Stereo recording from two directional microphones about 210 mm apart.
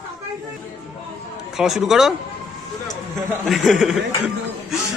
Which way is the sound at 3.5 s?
Centre (ahead or behind).